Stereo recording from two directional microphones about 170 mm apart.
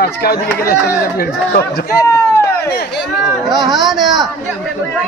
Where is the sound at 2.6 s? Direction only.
75° left (ahead or behind).